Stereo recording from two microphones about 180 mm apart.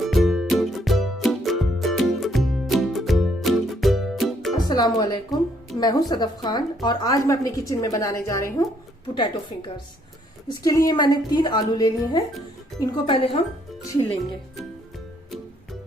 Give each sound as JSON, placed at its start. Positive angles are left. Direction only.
{"t": 0.0, "sound": "music", "side_deg": 0}
{"t": 4.5, "sound": "a woman's voice", "side_deg": 20}